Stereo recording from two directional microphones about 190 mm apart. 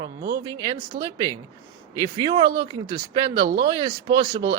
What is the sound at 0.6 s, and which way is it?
Speech, 25° right (ahead or behind).